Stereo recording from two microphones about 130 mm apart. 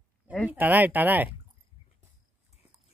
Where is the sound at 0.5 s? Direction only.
15° right (ahead or behind).